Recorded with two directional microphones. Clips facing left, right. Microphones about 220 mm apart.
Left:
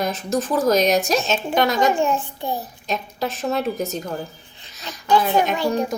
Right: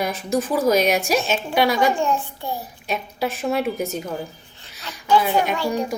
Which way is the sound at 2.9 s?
10° right (ahead or behind).